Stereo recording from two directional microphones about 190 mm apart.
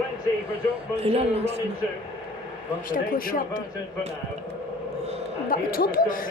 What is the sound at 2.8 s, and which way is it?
Speech, 45° left (ahead or behind).